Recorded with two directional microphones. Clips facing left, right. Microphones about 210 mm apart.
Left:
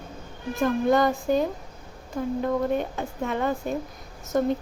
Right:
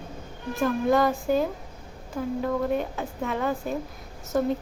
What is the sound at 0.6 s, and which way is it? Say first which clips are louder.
Speech: left 1 dB; 5° right (ahead or behind).